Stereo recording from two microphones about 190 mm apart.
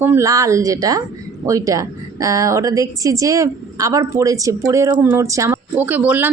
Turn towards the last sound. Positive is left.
turn(degrees=-10)  # may be behind; listen again after turning